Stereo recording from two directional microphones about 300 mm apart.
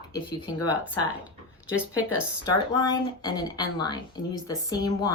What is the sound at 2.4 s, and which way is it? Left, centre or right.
Speech, centre.